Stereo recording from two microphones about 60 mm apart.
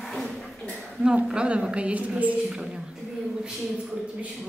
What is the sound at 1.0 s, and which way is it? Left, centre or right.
A woman's voice, centre.